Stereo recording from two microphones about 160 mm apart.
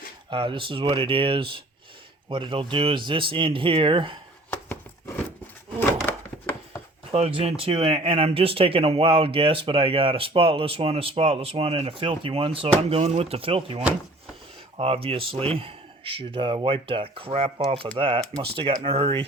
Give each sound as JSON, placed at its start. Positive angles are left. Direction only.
{"t": 0.3, "sound": "speech", "side_deg": -30}
{"t": 4.5, "sound": "a sound", "side_deg": 15}
{"t": 7.1, "sound": "speech", "side_deg": -40}